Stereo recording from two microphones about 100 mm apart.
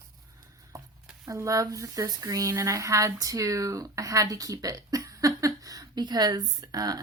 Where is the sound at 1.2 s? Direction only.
30° right (ahead or behind).